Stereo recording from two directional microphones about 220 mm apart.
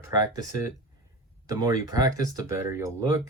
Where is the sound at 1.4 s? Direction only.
15° right (ahead or behind).